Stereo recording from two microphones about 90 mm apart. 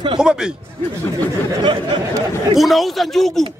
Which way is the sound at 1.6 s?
60° right (ahead or behind).